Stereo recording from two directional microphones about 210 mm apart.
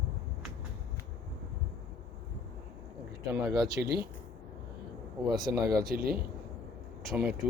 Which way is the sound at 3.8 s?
10° right (ahead or behind).